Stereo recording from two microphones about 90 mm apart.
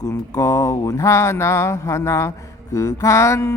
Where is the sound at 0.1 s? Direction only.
35° left (ahead or behind).